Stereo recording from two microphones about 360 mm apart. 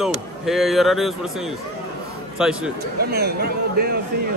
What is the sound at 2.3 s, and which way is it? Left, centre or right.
Speech, centre.